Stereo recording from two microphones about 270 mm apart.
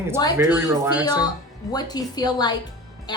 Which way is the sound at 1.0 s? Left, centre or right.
Centre.